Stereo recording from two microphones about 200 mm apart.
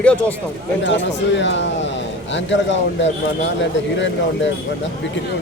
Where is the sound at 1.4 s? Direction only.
65° left (ahead or behind).